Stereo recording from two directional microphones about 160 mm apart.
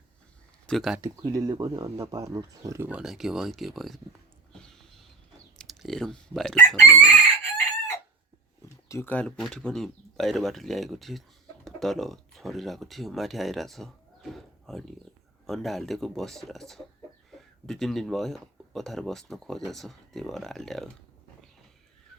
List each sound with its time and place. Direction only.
0.7 s speech: centre (ahead or behind)
0.9 s speech: 20° right (ahead or behind)
2.9 s speech: 5° right (ahead or behind)
5.5 s speech: centre (ahead or behind)
6.8 s chicken: 15° left (ahead or behind)
8.9 s speech: 15° left (ahead or behind)